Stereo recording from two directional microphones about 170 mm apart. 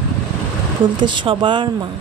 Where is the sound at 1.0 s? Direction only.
30° right (ahead or behind).